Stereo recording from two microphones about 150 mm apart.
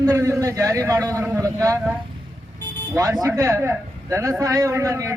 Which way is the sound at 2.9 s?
25° right (ahead or behind).